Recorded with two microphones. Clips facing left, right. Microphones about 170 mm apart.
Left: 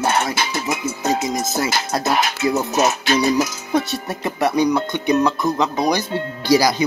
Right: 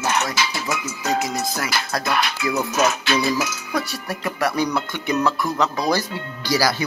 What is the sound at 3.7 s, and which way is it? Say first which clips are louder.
Speech: left 6 dB; 20° left (ahead or behind).